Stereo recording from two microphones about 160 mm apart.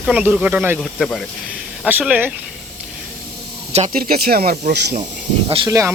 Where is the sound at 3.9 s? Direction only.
65° right (ahead or behind).